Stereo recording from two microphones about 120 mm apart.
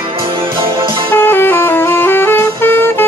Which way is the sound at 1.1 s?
20° left (ahead or behind).